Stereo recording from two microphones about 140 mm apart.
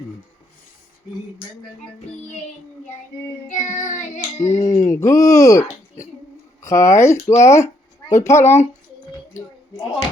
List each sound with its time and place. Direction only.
3.5 s child singing: 65° left (ahead or behind)
4.5 s speech: 20° left (ahead or behind)